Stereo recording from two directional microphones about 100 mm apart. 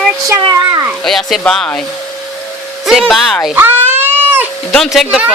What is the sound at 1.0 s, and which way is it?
Speech, 5° left (ahead or behind).